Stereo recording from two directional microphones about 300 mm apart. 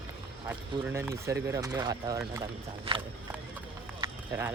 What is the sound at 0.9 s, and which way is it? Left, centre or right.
Speech, centre.